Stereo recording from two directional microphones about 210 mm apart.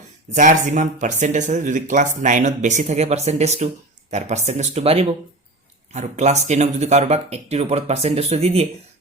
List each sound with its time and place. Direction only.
0.3 s speech: 35° right (ahead or behind)